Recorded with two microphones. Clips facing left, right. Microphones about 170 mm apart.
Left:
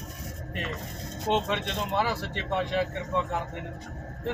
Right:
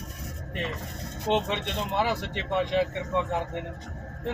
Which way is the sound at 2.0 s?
20° right (ahead or behind).